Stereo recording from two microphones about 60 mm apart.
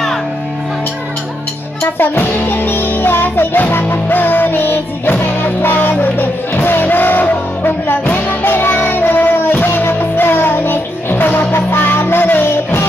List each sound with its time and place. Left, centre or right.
2.0 s music: left